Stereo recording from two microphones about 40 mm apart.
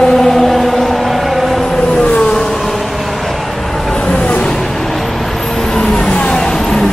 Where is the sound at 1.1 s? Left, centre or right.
Centre.